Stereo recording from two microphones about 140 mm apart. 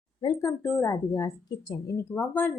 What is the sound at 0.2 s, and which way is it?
Speech, 25° left (ahead or behind).